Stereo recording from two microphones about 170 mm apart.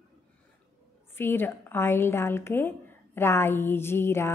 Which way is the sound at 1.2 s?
10° left (ahead or behind).